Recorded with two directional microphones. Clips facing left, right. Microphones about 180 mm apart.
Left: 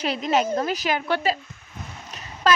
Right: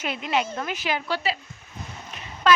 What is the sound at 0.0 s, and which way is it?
Speech, 40° left (ahead or behind).